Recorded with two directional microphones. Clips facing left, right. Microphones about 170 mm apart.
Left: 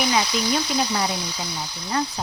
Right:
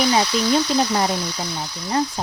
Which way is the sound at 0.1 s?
35° right (ahead or behind).